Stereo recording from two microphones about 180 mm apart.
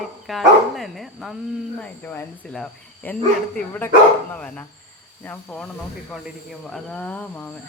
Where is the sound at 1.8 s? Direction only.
10° left (ahead or behind).